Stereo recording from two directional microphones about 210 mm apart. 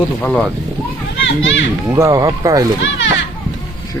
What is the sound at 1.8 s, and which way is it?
Speech, 15° right (ahead or behind).